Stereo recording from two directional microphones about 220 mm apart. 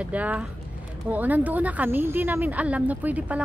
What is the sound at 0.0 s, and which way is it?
Speech, 5° right (ahead or behind).